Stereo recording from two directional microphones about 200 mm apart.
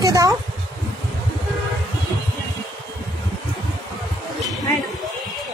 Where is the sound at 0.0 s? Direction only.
15° right (ahead or behind).